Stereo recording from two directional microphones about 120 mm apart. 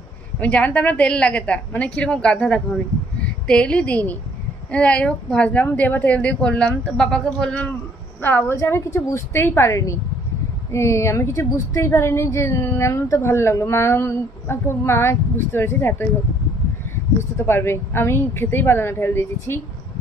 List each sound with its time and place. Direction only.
0.4 s speech: 10° left (ahead or behind)
8.2 s a woman's voice: 15° left (ahead or behind)
17.2 s a woman's voice: 20° left (ahead or behind)